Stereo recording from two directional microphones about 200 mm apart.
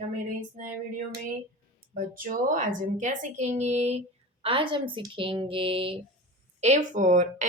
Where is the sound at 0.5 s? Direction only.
40° right (ahead or behind).